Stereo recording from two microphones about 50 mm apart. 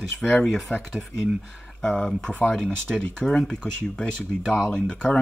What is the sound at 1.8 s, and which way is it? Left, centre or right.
Speech, centre.